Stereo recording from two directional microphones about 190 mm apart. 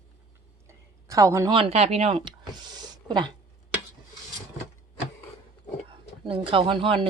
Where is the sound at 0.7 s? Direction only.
15° right (ahead or behind).